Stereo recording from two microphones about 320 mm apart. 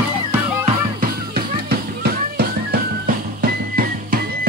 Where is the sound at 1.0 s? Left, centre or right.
Right.